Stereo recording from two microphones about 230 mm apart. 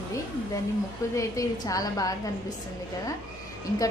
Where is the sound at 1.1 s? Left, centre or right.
Centre.